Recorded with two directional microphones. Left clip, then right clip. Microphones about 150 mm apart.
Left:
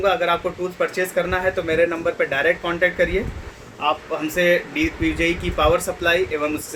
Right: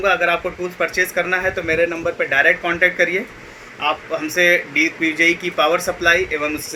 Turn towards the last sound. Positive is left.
turn(degrees=20)  # may be behind; listen again after turning